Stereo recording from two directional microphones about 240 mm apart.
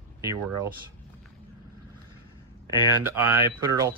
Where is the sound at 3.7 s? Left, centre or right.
Centre.